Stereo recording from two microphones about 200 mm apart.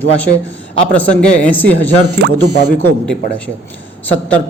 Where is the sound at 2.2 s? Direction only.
60° right (ahead or behind).